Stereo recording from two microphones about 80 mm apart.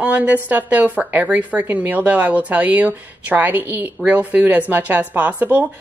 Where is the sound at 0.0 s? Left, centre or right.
Centre.